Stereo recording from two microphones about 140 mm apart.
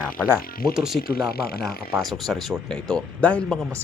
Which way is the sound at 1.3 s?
90° left.